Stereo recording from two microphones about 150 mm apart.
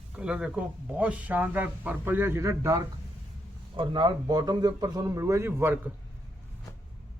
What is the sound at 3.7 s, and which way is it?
A man's voice, 30° right (ahead or behind).